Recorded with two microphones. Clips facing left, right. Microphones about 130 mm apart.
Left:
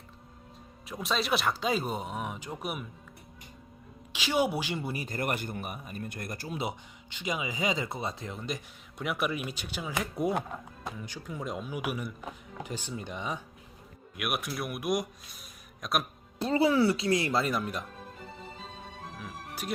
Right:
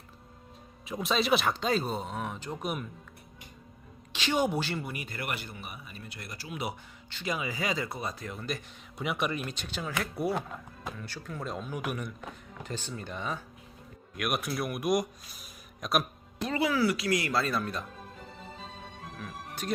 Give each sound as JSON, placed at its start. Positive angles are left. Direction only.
{"t": 0.9, "sound": "speech", "side_deg": 0}
{"t": 4.1, "sound": "speech", "side_deg": 10}
{"t": 4.8, "sound": "speech", "side_deg": 30}
{"t": 6.5, "sound": "speech", "side_deg": 25}
{"t": 9.0, "sound": "speech", "side_deg": 0}
{"t": 14.2, "sound": "speech", "side_deg": 5}
{"t": 16.4, "sound": "speech", "side_deg": 30}
{"t": 19.2, "sound": "speech", "side_deg": 10}